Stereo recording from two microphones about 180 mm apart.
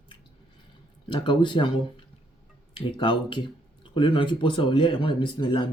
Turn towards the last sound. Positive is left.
turn(degrees=25)  # may be behind; listen again after turning